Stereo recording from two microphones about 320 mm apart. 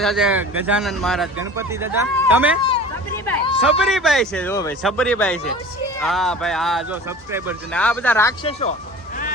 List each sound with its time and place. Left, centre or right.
0.0 s a man's voice: centre
3.2 s speech: centre
3.6 s a man's voice: centre
7.8 s speech: centre